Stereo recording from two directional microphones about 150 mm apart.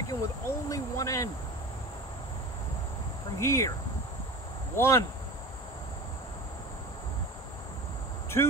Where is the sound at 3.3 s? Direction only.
15° left (ahead or behind).